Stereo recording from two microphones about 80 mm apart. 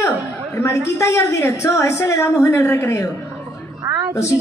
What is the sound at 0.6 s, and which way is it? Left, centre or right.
A woman's voice, left.